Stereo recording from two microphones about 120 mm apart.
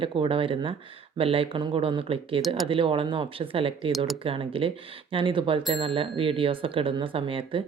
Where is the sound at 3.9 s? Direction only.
Centre (ahead or behind).